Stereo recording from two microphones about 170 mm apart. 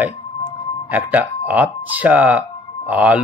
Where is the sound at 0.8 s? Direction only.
10° right (ahead or behind).